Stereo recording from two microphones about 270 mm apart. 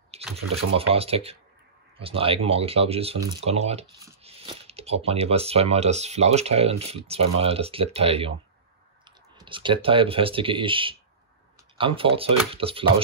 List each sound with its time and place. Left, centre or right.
0.1 s a sound: right
0.7 s speech: right
9.4 s speech: centre